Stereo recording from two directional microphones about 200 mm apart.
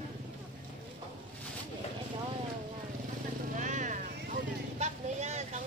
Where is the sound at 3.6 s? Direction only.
40° right (ahead or behind).